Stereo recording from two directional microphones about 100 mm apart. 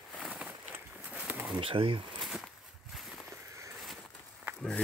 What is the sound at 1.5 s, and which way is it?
Speech, 65° right (ahead or behind).